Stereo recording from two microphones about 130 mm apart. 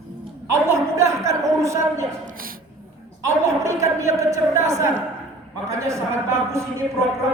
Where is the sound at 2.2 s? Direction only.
90° right.